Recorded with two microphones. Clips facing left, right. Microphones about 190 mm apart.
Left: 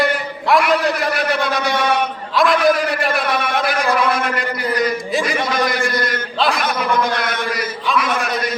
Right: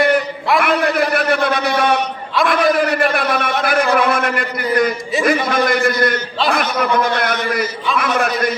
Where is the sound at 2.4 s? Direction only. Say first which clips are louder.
Even; 55° right (ahead or behind).